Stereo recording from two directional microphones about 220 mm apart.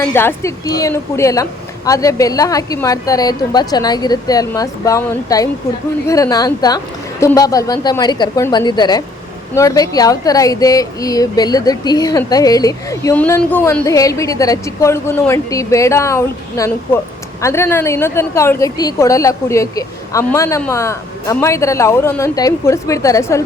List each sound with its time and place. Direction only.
0.0 s speech: 10° left (ahead or behind)